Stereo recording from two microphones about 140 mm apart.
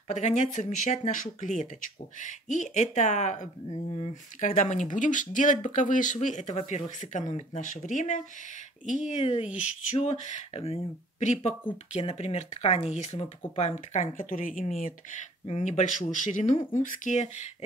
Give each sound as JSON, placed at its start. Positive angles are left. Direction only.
{"t": 0.1, "sound": "speech", "side_deg": 60}
{"t": 9.2, "sound": "speech", "side_deg": 45}
{"t": 15.4, "sound": "speech", "side_deg": 50}